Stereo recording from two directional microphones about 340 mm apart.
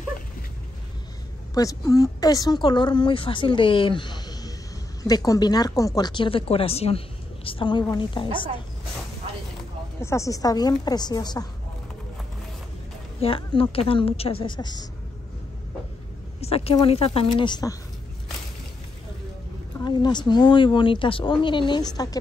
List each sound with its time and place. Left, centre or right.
1.5 s speech: centre
9.9 s speech: centre
13.2 s speech: centre
16.3 s speech: centre
19.8 s speech: centre